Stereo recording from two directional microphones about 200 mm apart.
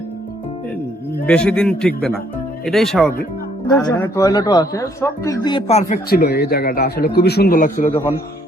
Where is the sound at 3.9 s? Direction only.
15° left (ahead or behind).